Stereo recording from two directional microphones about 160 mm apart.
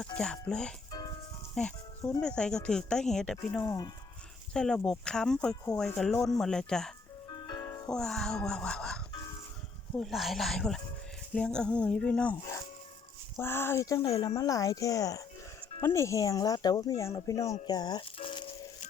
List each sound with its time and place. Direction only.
0.0 s speech: 5° left (ahead or behind)
0.9 s music: 25° left (ahead or behind)
1.5 s speech: 5° left (ahead or behind)
3.7 s speech: 25° left (ahead or behind)
4.5 s speech: 5° left (ahead or behind)
7.3 s music: 25° left (ahead or behind)
7.9 s speech: 5° left (ahead or behind)
10.0 s speech: centre (ahead or behind); by 18.5 s 35° left (ahead or behind)